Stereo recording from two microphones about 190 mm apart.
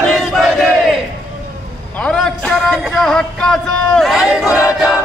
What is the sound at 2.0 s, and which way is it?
A man's voice, 5° left (ahead or behind).